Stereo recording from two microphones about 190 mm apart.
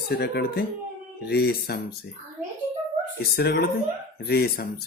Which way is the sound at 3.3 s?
55° left (ahead or behind).